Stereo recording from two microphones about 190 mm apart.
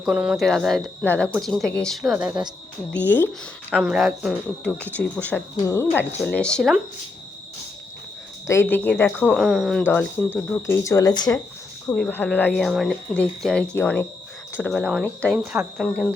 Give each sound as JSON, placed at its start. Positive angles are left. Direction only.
{"t": 0.0, "sound": "speech", "side_deg": -5}
{"t": 2.9, "sound": "speech", "side_deg": 10}
{"t": 3.7, "sound": "speech", "side_deg": -5}
{"t": 8.4, "sound": "speech", "side_deg": 10}
{"t": 11.9, "sound": "speech", "side_deg": 10}